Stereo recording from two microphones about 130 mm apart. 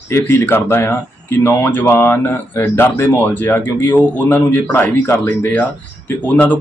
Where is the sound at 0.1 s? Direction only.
20° left (ahead or behind).